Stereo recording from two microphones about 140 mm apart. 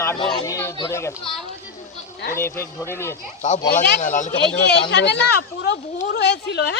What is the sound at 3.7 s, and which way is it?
Speech, 60° left (ahead or behind).